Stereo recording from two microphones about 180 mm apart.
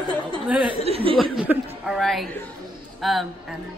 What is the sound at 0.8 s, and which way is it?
Speech, 30° right (ahead or behind).